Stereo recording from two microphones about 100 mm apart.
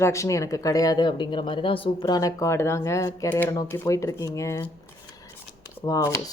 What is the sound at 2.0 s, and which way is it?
A woman's voice, 40° left (ahead or behind).